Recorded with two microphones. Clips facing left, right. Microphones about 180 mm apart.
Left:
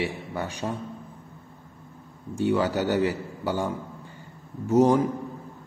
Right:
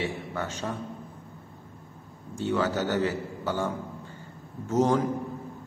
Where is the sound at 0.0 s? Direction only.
15° left (ahead or behind).